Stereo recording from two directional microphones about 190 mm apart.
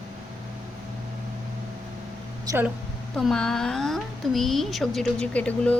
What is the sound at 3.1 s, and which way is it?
A woman's voice, 5° left (ahead or behind).